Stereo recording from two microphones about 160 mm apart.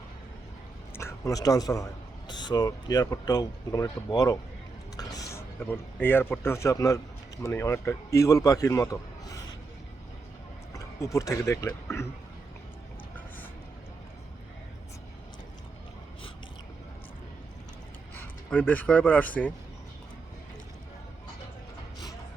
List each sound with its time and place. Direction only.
0.9 s a man's voice: 20° left (ahead or behind)
10.8 s speech: 20° left (ahead or behind)
13.1 s a sound: 10° left (ahead or behind)
18.1 s speech: 10° left (ahead or behind)